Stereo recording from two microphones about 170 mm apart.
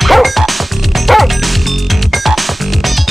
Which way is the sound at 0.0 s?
Centre (ahead or behind).